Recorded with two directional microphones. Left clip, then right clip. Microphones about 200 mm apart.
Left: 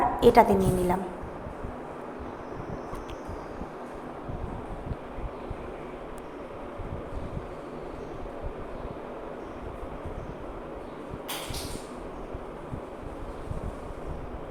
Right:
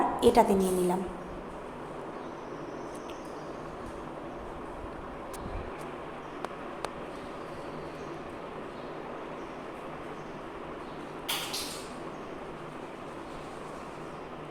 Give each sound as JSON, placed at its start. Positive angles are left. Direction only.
{"t": 0.2, "sound": "a woman's voice", "side_deg": 5}